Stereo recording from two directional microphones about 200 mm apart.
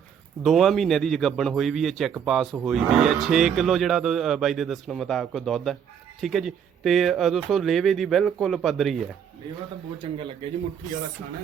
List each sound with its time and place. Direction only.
0.4 s speech: centre (ahead or behind)